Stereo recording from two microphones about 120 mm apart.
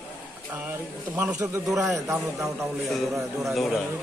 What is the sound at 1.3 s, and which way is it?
Speech, 25° right (ahead or behind).